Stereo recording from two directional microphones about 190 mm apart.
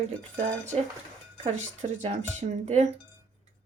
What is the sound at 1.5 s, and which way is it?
A woman's voice, 40° right (ahead or behind).